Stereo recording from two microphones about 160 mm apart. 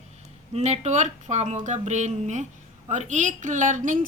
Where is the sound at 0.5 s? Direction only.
45° right (ahead or behind).